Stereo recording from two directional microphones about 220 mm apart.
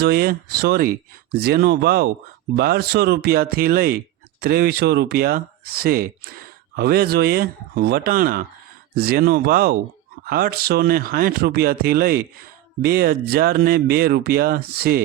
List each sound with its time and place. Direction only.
0.0 s speech: 45° right (ahead or behind)